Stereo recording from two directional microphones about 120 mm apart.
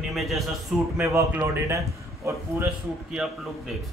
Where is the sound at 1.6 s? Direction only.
25° right (ahead or behind).